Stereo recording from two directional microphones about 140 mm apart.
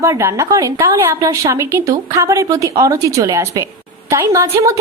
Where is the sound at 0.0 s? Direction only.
20° right (ahead or behind).